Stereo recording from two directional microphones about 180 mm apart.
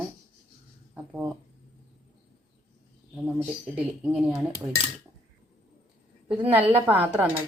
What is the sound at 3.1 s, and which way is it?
Speech, 5° right (ahead or behind).